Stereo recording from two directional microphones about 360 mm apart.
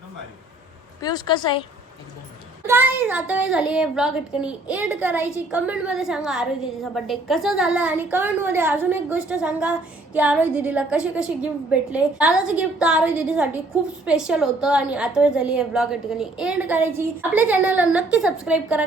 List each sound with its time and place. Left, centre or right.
1.0 s a woman's voice: centre
2.6 s a woman's voice: centre